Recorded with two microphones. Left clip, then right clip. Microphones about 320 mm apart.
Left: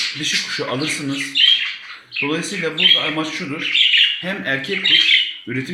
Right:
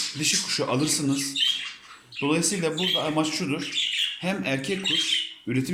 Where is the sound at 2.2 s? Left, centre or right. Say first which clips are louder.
Left 4 dB; centre.